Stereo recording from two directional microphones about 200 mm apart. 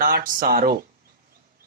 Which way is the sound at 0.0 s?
45° right (ahead or behind).